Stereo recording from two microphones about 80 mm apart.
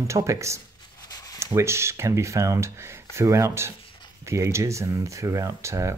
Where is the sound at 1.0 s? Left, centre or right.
Left.